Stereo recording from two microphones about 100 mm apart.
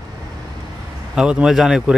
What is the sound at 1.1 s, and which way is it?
Speech, 10° right (ahead or behind).